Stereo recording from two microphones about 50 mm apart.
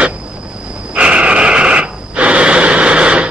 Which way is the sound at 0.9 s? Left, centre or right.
Right.